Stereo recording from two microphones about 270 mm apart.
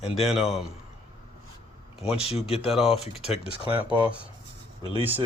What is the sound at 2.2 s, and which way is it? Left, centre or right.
Speech, left.